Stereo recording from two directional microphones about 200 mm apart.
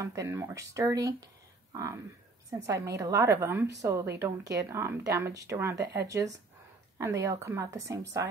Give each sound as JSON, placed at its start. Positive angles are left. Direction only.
{"t": 0.0, "sound": "a woman's voice", "side_deg": -15}